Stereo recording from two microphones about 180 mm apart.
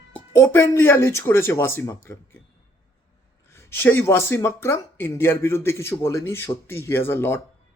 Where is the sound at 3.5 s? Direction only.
15° left (ahead or behind).